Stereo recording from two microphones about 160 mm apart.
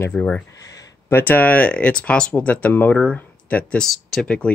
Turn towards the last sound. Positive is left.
turn(degrees=10)  # may be behind; listen again after turning